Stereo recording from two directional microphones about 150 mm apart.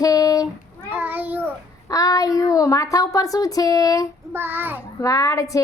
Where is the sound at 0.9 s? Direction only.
10° right (ahead or behind).